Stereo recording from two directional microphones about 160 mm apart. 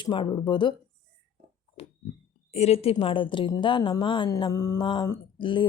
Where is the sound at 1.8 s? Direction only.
35° left (ahead or behind).